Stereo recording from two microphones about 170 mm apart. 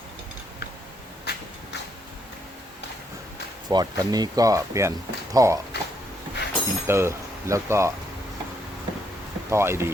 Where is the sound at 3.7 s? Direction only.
25° right (ahead or behind).